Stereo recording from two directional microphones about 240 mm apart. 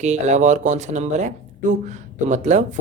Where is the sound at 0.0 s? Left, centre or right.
Right.